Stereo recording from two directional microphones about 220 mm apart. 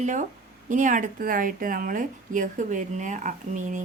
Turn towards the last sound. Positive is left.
turn(degrees=-35)  # may be behind; listen again after turning